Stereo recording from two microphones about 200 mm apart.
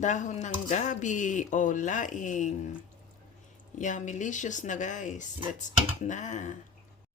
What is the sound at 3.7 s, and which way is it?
Speech, 40° left (ahead or behind).